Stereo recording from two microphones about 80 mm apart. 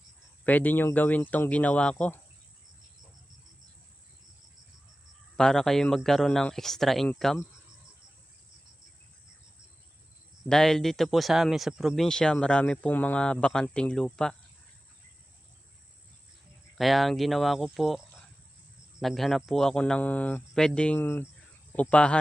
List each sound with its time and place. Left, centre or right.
0.4 s speech: left
5.4 s speech: centre
10.5 s speech: centre
16.7 s speech: centre
19.8 s speech: centre
21.0 s speech: left
21.7 s speech: centre